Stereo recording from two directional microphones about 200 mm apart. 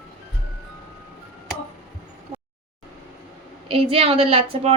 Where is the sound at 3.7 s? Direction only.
30° right (ahead or behind).